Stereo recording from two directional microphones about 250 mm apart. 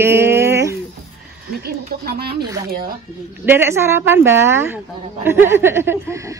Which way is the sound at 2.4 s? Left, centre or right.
Centre.